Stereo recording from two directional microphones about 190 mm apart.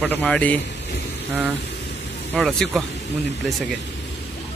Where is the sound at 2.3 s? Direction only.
Centre (ahead or behind).